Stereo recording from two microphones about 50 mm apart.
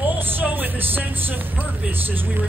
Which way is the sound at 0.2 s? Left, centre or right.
Right.